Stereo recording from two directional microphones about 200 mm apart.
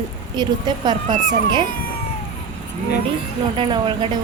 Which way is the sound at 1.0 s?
40° right (ahead or behind).